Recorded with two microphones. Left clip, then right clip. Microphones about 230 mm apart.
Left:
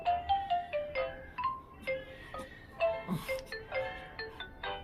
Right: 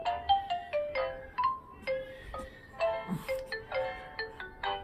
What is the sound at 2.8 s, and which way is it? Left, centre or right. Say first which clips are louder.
Music: right 1 dB; right.